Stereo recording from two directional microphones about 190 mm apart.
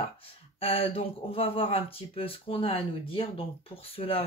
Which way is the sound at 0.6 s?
30° left (ahead or behind).